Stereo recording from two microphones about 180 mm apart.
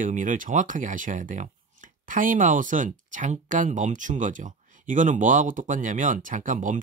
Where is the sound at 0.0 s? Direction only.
45° right (ahead or behind).